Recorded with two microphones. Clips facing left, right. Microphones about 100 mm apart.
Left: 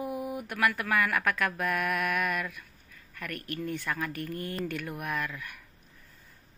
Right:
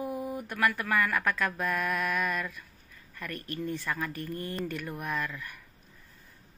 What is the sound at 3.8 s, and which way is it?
Mantra, centre (ahead or behind).